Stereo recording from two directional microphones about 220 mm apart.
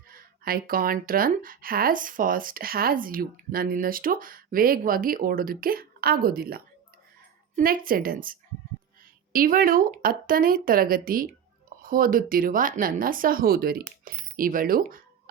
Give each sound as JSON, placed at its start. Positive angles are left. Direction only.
{"t": 0.1, "sound": "speech", "side_deg": -40}